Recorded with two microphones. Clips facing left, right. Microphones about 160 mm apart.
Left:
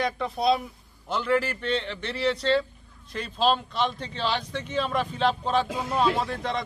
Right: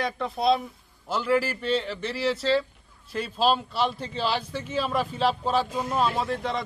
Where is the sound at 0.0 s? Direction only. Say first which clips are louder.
Even; centre (ahead or behind).